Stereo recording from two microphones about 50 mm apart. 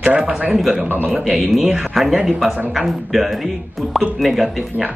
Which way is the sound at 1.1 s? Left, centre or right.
Centre.